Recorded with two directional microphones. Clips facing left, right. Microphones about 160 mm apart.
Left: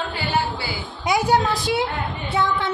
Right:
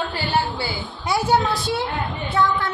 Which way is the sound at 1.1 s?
15° left (ahead or behind).